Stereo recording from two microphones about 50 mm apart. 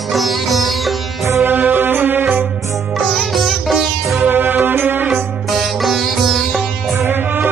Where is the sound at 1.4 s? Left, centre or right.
Right.